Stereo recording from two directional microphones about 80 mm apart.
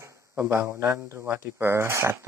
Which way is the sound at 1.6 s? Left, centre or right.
Right.